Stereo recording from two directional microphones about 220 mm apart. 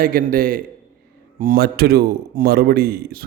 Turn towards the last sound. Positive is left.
turn(degrees=-45)  # may be behind; listen again after turning